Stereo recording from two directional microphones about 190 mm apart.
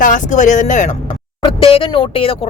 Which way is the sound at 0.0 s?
40° left (ahead or behind).